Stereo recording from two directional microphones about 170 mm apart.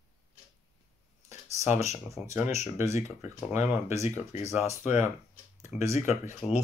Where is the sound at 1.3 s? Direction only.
40° left (ahead or behind).